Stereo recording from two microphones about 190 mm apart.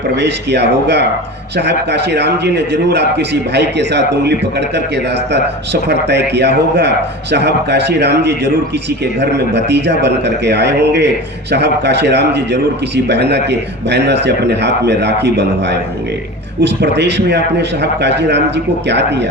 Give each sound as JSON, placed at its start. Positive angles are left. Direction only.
{"t": 0.2, "sound": "a man's voice", "side_deg": -65}